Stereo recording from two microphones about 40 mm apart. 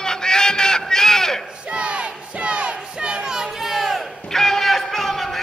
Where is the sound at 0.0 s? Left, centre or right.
Centre.